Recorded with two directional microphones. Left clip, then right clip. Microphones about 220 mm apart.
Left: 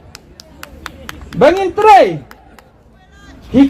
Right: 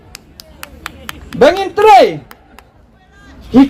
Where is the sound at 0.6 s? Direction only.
35° right (ahead or behind).